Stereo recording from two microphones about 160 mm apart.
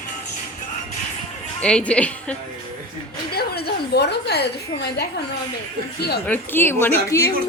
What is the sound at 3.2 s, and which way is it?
A woman's voice, 75° left (ahead or behind).